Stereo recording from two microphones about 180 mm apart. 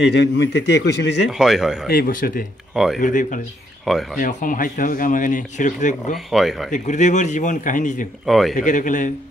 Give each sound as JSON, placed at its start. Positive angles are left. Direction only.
{"t": 0.0, "sound": "a man's voice", "side_deg": 70}
{"t": 1.3, "sound": "speech", "side_deg": 0}
{"t": 1.9, "sound": "speech", "side_deg": 55}
{"t": 2.7, "sound": "speech", "side_deg": 0}
{"t": 3.0, "sound": "speech", "side_deg": 45}
{"t": 3.8, "sound": "speech", "side_deg": 0}
{"t": 4.2, "sound": "speech", "side_deg": 45}
{"t": 6.1, "sound": "speech", "side_deg": 0}
{"t": 6.7, "sound": "speech", "side_deg": 40}
{"t": 8.3, "sound": "speech", "side_deg": 0}
{"t": 8.5, "sound": "speech", "side_deg": 45}